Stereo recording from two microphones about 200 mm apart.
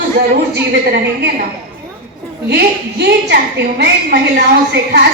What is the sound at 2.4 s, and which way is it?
A woman's voice, 55° right (ahead or behind).